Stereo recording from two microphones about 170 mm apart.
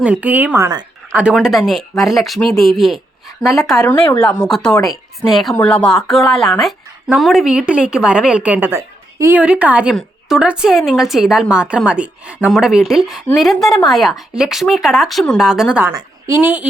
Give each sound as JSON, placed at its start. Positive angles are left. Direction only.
{"t": 0.0, "sound": "speech", "side_deg": -5}
{"t": 1.1, "sound": "a woman's voice", "side_deg": -5}
{"t": 15.9, "sound": "a woman's voice", "side_deg": -20}